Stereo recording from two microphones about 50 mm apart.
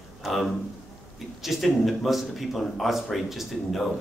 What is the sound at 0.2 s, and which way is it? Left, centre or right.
A man's voice, centre.